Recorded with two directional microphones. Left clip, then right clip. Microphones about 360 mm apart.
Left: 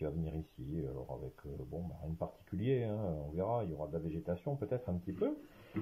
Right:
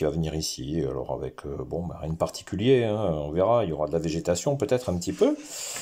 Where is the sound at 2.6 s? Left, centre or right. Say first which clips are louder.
Right 15 dB; right.